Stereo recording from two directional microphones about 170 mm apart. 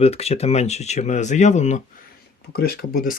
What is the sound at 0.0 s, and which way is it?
Speech, 35° left (ahead or behind).